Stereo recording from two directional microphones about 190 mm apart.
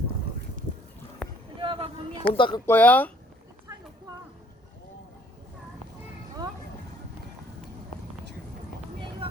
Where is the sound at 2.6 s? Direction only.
10° left (ahead or behind).